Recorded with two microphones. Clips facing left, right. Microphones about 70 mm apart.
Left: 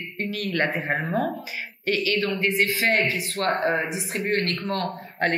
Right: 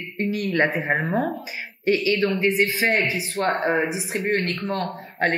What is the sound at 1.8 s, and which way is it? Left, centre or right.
Speech, left.